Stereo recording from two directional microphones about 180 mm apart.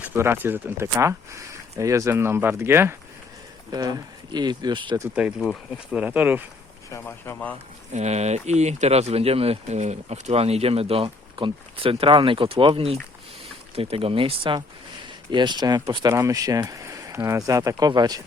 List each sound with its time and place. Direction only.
0.0 s speech: 10° right (ahead or behind)
5.1 s speech: 5° right (ahead or behind)
6.9 s speech: 10° left (ahead or behind)
7.9 s speech: 40° right (ahead or behind); by 18.2 s 20° right (ahead or behind)